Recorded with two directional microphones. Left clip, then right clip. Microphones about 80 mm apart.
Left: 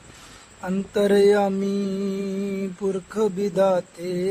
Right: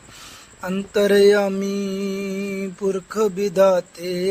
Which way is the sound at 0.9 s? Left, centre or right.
Right.